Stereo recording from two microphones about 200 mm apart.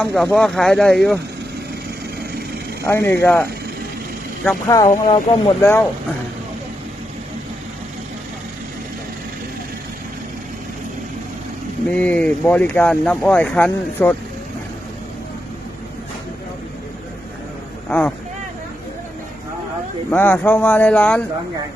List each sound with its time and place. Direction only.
0.0 s speech: 5° left (ahead or behind)
2.8 s speech: 10° left (ahead or behind)
5.0 s speech: 25° left (ahead or behind)
11.9 s speech: 5° left (ahead or behind)
17.8 s speech: 10° left (ahead or behind)
20.1 s speech: 10° left (ahead or behind)